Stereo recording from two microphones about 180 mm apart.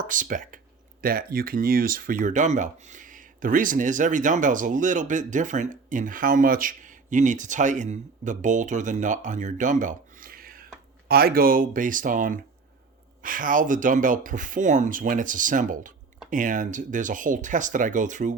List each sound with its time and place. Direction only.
0.0 s speech: 45° right (ahead or behind)